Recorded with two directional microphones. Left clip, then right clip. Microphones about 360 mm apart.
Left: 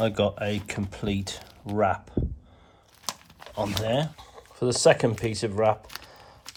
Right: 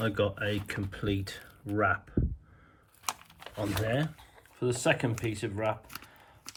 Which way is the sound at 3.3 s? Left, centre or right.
Centre.